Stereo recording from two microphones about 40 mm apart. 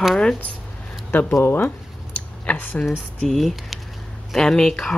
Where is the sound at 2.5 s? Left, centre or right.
Left.